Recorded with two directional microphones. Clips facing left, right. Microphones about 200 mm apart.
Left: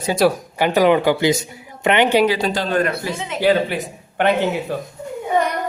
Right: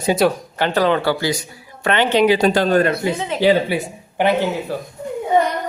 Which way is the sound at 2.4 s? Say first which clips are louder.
Right 6 dB; 50° right (ahead or behind).